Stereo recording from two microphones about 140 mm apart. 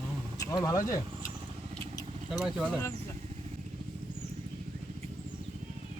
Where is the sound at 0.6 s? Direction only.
25° left (ahead or behind).